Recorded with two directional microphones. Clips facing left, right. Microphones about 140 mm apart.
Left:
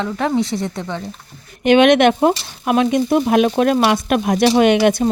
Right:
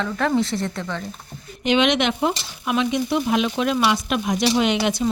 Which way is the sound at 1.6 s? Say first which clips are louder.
Left 8 dB; 55° left (ahead or behind).